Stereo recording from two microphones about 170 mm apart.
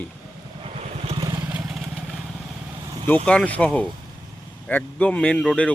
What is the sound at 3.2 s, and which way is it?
Speech, 5° left (ahead or behind).